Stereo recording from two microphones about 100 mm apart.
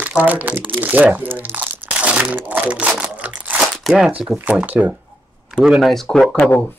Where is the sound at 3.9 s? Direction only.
Centre (ahead or behind).